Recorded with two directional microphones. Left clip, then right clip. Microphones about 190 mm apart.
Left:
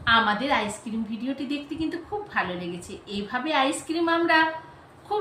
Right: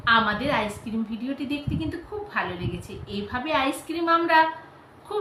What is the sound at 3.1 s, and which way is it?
A woman's voice, 5° left (ahead or behind).